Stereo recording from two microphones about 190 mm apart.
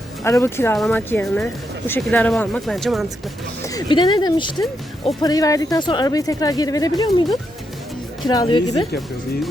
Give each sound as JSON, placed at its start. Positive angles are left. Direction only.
{"t": 0.3, "sound": "speech", "side_deg": 15}
{"t": 3.7, "sound": "a woman's voice", "side_deg": 20}
{"t": 8.3, "sound": "a woman's voice", "side_deg": 20}